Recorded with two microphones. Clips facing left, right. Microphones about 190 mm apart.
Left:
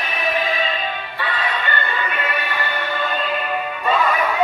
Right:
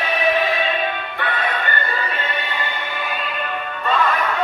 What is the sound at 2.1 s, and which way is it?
Music, 30° right (ahead or behind).